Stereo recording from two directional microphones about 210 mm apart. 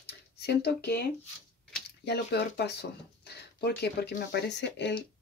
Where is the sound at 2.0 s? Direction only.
50° left (ahead or behind).